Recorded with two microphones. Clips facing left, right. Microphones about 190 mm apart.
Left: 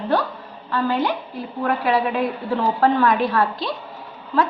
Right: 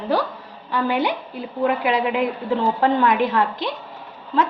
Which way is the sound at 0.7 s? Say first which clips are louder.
Even; 15° right (ahead or behind).